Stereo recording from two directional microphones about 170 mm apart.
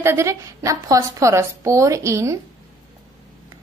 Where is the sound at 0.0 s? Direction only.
15° right (ahead or behind).